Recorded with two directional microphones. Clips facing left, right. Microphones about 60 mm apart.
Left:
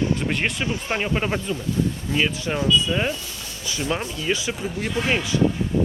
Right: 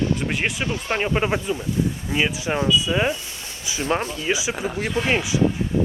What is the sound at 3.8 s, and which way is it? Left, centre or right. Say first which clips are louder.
Speech: right 3 dB; right.